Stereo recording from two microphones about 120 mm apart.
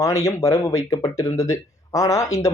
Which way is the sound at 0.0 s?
25° left (ahead or behind).